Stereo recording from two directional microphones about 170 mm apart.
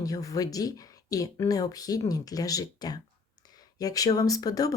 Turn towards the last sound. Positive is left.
turn(degrees=20)  # may be behind; listen again after turning